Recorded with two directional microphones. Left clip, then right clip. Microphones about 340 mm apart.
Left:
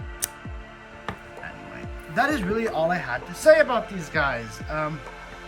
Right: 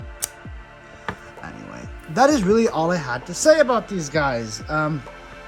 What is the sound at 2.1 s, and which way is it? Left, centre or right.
Speech, centre.